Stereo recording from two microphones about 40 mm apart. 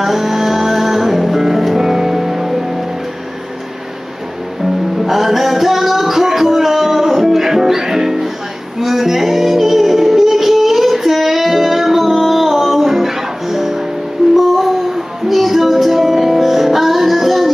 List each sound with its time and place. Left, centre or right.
0.0 s music: centre
4.9 s music: centre